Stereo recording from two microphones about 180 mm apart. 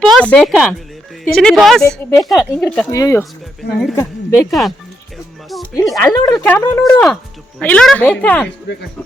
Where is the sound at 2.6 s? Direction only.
Centre (ahead or behind).